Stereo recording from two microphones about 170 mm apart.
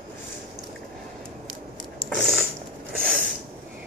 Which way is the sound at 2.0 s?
Centre (ahead or behind).